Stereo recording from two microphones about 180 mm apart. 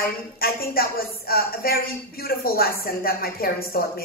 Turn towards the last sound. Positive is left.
turn(degrees=55)  # may be behind; listen again after turning